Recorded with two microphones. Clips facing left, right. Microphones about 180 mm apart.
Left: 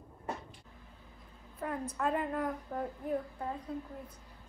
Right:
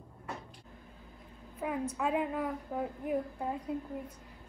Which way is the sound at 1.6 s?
10° right (ahead or behind).